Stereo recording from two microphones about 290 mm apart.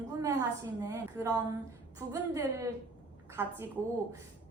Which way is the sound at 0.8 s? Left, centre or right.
Centre.